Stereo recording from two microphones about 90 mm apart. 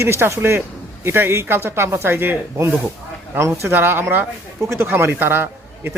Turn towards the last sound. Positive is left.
turn(degrees=-25)  # may be behind; listen again after turning